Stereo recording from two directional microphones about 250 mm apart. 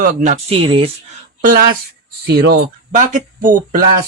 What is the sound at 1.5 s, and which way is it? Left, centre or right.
Speech, right.